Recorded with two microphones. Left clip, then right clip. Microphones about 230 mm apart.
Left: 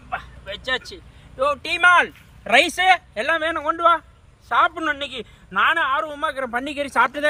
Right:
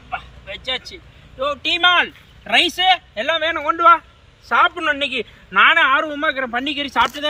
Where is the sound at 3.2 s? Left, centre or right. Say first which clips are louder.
Right 2 dB; left.